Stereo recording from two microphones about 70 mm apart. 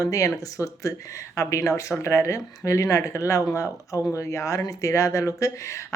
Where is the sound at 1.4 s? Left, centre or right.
Left.